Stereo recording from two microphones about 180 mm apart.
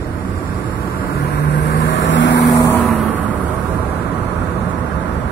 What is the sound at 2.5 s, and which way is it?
Vehicle, 10° left (ahead or behind).